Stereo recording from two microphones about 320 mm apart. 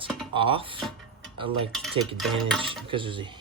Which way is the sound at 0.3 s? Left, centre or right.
Centre.